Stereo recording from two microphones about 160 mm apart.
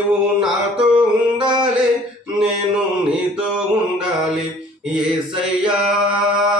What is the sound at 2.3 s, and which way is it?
Mantra, 5° right (ahead or behind).